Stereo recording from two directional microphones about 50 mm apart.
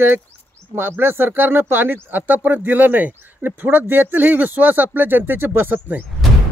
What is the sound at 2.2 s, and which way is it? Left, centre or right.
Speech, right.